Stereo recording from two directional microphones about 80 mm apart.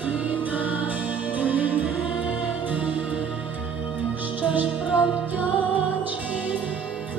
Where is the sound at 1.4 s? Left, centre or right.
Centre.